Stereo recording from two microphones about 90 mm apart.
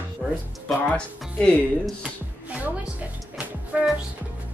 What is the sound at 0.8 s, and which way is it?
Speech, 10° left (ahead or behind).